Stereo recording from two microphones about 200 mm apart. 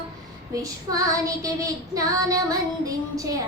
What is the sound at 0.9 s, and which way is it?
Female singing, 15° right (ahead or behind).